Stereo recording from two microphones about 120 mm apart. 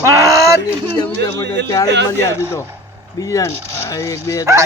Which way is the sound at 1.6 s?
25° left (ahead or behind).